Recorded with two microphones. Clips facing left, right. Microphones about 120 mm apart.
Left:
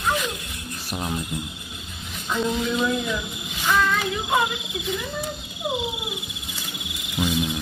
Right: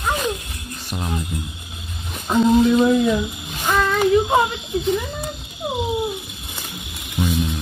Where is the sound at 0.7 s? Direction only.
5° left (ahead or behind).